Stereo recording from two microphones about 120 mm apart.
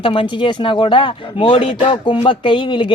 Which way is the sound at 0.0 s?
45° left (ahead or behind).